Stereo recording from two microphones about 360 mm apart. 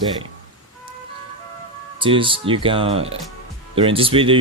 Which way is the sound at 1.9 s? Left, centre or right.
Centre.